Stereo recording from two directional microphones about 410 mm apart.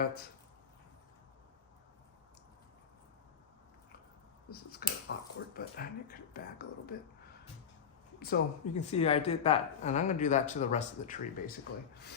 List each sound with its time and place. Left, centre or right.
4.4 s a sound: left
5.5 s speech: left
8.2 s a woman's voice: centre